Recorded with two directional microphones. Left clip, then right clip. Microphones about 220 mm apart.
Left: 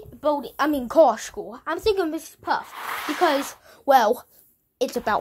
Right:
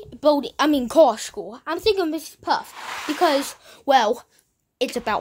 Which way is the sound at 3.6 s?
15° right (ahead or behind).